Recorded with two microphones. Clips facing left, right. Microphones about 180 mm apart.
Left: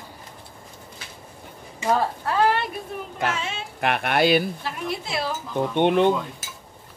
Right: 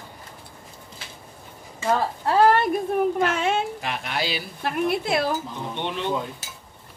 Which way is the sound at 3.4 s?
55° right (ahead or behind).